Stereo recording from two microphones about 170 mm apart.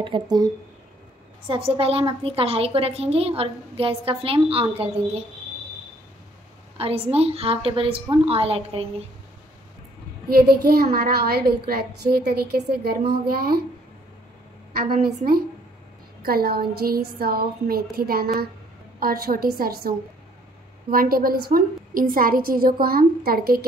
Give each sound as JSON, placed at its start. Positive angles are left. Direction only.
{"t": 0.0, "sound": "speech", "side_deg": -25}
{"t": 1.5, "sound": "a woman's voice", "side_deg": -35}
{"t": 6.8, "sound": "a woman's voice", "side_deg": -35}
{"t": 10.2, "sound": "a woman's voice", "side_deg": -65}
{"t": 15.0, "sound": "a woman's voice", "side_deg": -60}